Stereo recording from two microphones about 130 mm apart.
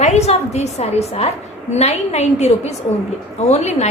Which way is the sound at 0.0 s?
60° left (ahead or behind).